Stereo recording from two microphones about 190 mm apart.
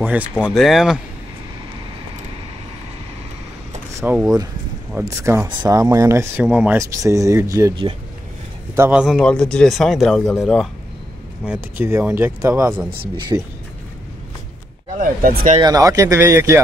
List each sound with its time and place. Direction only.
0.5 s speech: centre (ahead or behind)
4.0 s speech: 10° right (ahead or behind)
8.7 s speech: 10° right (ahead or behind)
11.8 s speech: 10° right (ahead or behind)
15.0 s speech: 45° right (ahead or behind)
15.6 s speech: 20° right (ahead or behind)